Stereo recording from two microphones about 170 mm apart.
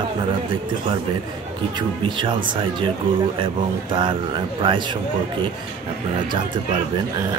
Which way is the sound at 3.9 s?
30° right (ahead or behind).